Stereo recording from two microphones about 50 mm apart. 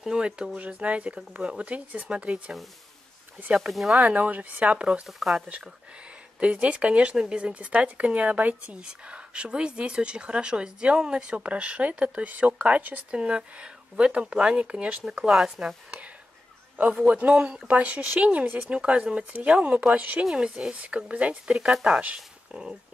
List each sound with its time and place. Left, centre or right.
0.1 s speech: right
3.7 s speech: centre
4.0 s speech: right
6.4 s speech: right
15.3 s speech: centre
17.0 s speech: right
18.7 s speech: right
20.2 s speech: centre
22.5 s speech: centre